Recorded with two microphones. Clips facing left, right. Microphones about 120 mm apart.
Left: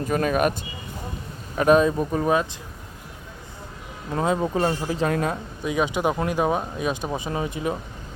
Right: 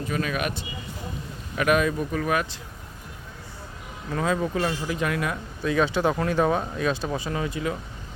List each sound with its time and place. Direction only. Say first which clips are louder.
0.1 s speech: left 7 dB; 45° left (ahead or behind)
1.5 s speech: left 5 dB; 30° left (ahead or behind)
4.1 s speech: left 2 dB; 25° left (ahead or behind)
5.6 s speech: right 1 dB; 15° left (ahead or behind)